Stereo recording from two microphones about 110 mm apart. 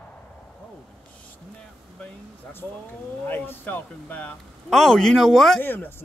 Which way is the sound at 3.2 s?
20° left (ahead or behind).